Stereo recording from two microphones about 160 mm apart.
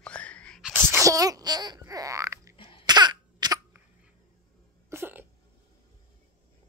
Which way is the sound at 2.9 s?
25° right (ahead or behind).